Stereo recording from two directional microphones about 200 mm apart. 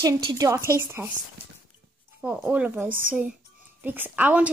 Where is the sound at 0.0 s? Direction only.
15° right (ahead or behind).